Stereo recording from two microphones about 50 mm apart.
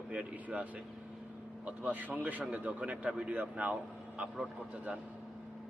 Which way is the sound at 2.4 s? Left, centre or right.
Right.